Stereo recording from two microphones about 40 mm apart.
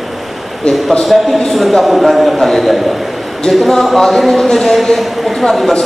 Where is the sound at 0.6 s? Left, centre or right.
Centre.